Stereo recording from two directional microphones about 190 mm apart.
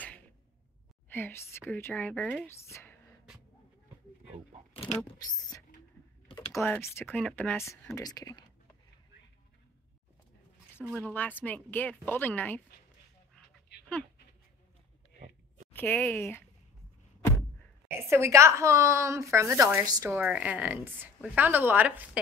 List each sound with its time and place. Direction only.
1.0 s speech: 10° left (ahead or behind)
4.7 s speech: 30° left (ahead or behind)
6.2 s computer keyboard: 25° left (ahead or behind)
6.5 s speech: 10° left (ahead or behind)
11.0 s speech: 10° left (ahead or behind)
15.7 s speech: 10° left (ahead or behind)
17.8 s a woman's voice: 15° right (ahead or behind)